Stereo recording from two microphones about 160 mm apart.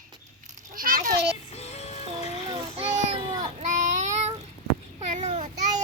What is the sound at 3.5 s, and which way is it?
Child singing, 45° right (ahead or behind).